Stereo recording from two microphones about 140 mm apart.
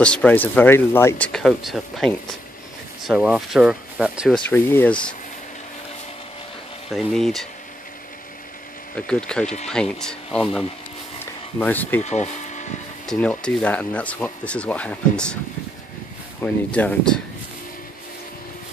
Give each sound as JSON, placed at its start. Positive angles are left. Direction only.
{"t": 0.0, "sound": "speech", "side_deg": 10}
{"t": 3.3, "sound": "speech", "side_deg": 0}
{"t": 4.5, "sound": "speech", "side_deg": 15}
{"t": 6.9, "sound": "speech", "side_deg": 0}
{"t": 8.9, "sound": "speech", "side_deg": 5}
{"t": 11.6, "sound": "speech", "side_deg": 10}
{"t": 12.0, "sound": "speech", "side_deg": 55}
{"t": 13.0, "sound": "speech", "side_deg": 5}
{"t": 16.3, "sound": "speech", "side_deg": 10}